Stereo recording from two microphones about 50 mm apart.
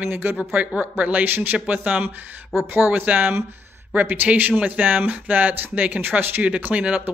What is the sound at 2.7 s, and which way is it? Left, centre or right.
Speech, right.